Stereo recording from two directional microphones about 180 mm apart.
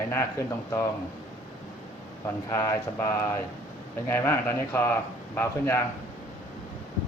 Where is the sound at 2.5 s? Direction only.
15° left (ahead or behind).